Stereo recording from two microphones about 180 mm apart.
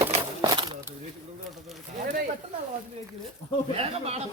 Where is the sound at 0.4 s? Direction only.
25° right (ahead or behind).